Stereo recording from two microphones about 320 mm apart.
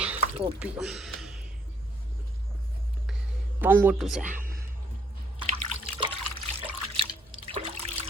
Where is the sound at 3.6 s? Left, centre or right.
Centre.